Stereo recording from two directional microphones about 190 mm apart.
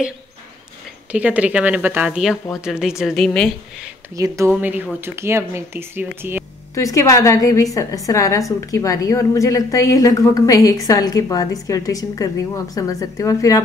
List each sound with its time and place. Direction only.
1.1 s a woman's voice: 5° right (ahead or behind)
4.2 s speech: 20° right (ahead or behind)
6.7 s a woman's voice: 15° left (ahead or behind)